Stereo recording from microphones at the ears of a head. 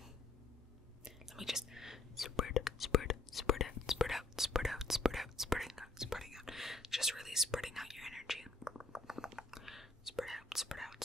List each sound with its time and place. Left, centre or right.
1.0 s whispering: centre
2.2 s whispering: left
4.1 s whispering: centre